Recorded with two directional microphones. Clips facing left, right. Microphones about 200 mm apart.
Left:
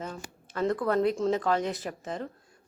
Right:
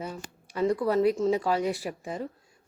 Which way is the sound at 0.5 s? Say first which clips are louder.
Right 2 dB; 10° right (ahead or behind).